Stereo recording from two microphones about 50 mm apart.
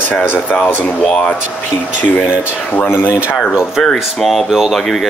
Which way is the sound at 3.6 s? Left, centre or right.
Centre.